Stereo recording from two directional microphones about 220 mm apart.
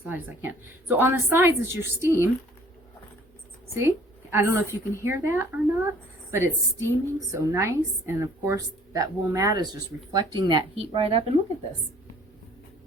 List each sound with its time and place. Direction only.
0.1 s a woman's voice: 10° right (ahead or behind)
3.8 s a woman's voice: 10° right (ahead or behind)